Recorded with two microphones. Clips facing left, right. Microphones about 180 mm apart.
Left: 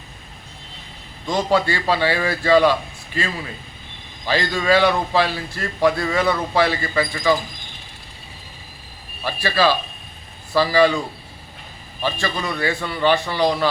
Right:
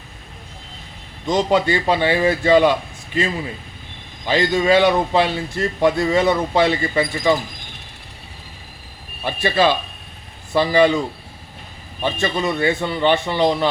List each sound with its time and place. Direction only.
1.3 s a man's voice: 20° right (ahead or behind)
9.2 s a man's voice: 20° right (ahead or behind)
12.0 s a man's voice: 25° right (ahead or behind)